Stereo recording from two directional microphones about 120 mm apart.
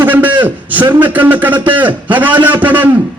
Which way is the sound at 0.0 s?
15° right (ahead or behind).